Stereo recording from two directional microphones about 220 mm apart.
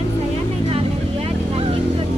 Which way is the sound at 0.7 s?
25° right (ahead or behind).